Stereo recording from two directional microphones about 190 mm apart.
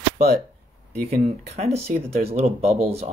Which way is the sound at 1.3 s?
35° right (ahead or behind).